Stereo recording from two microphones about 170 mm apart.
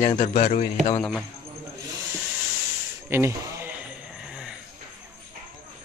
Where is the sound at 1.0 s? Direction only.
5° left (ahead or behind).